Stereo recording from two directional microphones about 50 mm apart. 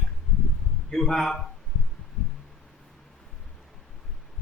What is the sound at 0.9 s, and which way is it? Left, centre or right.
Speech, centre.